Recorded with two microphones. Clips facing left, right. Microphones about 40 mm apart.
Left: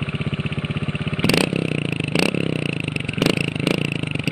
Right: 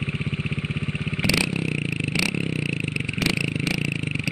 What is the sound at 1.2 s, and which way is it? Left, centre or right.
Vehicle, left.